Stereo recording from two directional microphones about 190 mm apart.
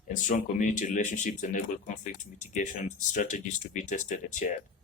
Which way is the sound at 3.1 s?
40° left (ahead or behind).